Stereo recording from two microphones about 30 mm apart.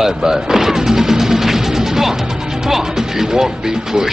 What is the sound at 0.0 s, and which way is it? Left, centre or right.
Music, centre.